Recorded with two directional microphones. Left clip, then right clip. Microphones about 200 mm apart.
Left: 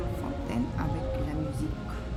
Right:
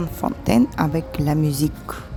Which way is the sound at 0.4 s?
40° right (ahead or behind).